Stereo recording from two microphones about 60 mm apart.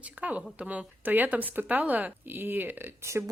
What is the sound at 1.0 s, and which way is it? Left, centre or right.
Speech, right.